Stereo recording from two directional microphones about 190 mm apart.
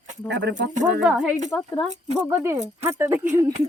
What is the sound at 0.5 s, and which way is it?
Speech, 40° right (ahead or behind).